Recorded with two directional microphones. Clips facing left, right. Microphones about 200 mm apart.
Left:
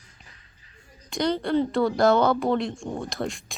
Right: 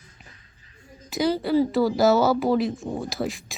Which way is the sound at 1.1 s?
5° right (ahead or behind).